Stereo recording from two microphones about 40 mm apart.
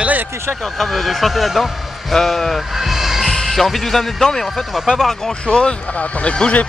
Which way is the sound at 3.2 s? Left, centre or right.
Centre.